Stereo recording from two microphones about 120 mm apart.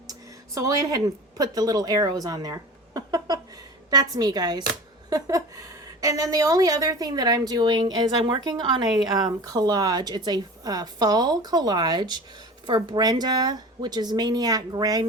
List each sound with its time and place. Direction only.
0.1 s a woman's voice: 30° right (ahead or behind)